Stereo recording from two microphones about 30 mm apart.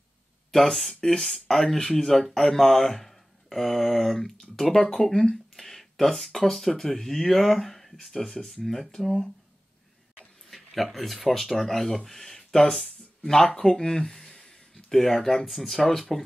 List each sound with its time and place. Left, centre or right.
0.5 s speech: centre
10.5 s speech: centre
12.7 s a sound: centre
13.6 s speech: left
15.2 s speech: centre